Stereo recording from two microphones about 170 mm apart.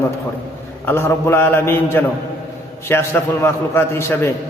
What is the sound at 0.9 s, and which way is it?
A man's voice, 15° left (ahead or behind).